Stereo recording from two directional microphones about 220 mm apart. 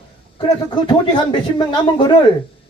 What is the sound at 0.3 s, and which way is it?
Speech, 20° left (ahead or behind).